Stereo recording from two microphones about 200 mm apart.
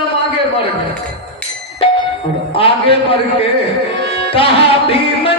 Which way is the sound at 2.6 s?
25° left (ahead or behind).